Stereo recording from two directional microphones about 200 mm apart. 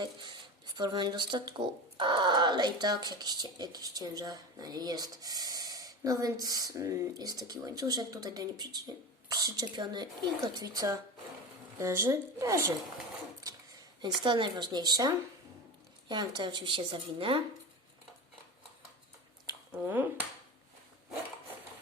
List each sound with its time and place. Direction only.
0.0 s speech: 20° right (ahead or behind)
14.0 s speech: 25° right (ahead or behind)
19.5 s speech: 10° right (ahead or behind)